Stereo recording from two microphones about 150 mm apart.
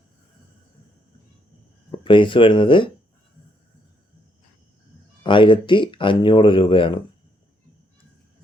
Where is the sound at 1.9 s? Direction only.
35° left (ahead or behind).